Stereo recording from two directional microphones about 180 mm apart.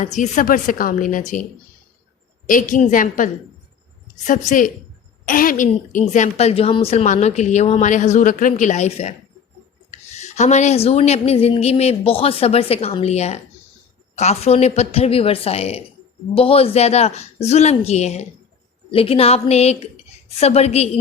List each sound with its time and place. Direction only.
0.0 s speech: 45° left (ahead or behind)
2.5 s a woman's voice: 50° left (ahead or behind)